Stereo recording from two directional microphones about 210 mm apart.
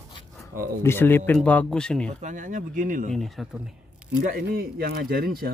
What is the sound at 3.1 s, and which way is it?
Speech, centre (ahead or behind).